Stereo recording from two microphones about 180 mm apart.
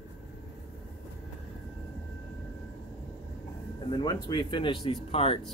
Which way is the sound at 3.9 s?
25° left (ahead or behind).